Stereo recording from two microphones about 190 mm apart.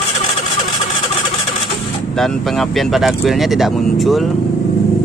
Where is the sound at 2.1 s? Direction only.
Centre (ahead or behind).